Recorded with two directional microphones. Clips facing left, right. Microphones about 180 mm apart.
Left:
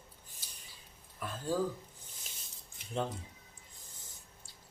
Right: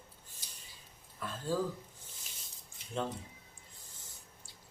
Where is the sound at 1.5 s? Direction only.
15° left (ahead or behind).